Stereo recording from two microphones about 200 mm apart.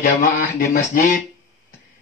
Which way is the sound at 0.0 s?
45° left (ahead or behind).